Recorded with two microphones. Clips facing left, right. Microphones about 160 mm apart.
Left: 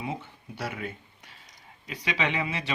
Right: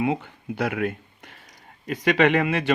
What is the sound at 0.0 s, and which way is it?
Speech, 60° right (ahead or behind).